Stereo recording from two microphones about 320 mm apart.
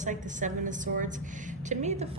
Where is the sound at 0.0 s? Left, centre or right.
Right.